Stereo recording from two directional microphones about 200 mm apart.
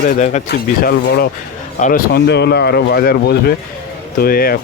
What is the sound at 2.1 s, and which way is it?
Speech, 55° left (ahead or behind).